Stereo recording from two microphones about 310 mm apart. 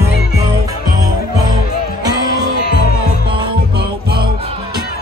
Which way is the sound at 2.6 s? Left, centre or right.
Left.